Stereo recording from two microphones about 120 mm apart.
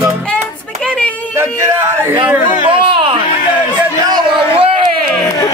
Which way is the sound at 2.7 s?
45° right (ahead or behind).